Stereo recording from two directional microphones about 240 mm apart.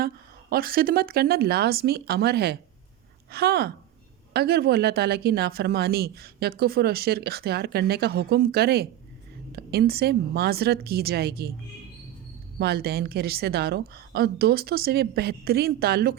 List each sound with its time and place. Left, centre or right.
0.5 s speech: right
12.5 s speech: right